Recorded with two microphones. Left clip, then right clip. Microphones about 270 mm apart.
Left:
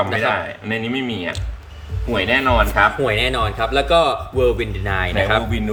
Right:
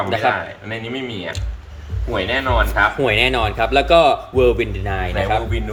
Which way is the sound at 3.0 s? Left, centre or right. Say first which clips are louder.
Right 2 dB; centre.